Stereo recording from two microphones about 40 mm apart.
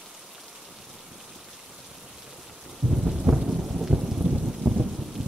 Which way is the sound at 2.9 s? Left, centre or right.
Centre.